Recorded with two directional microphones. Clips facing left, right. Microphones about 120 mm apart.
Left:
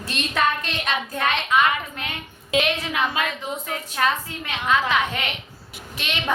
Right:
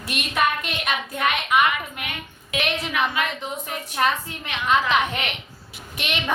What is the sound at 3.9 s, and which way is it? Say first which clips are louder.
A woman's voice: right 1 dB; 20° right (ahead or behind).